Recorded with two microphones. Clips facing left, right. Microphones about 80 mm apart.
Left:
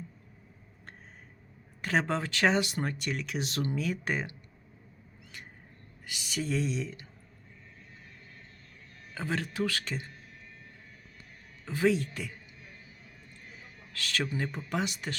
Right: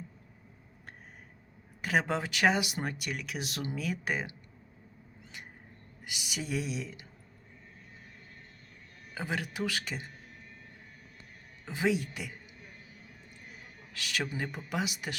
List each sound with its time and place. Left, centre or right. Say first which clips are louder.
1.8 s speech: even; centre
6.1 s speech: left 3 dB; centre
9.1 s speech: left 2 dB; centre
11.6 s speech: left 3 dB; centre
13.9 s speech: left 2 dB; centre